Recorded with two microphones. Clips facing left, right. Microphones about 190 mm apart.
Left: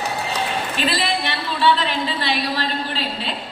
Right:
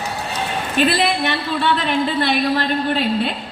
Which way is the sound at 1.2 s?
50° right (ahead or behind).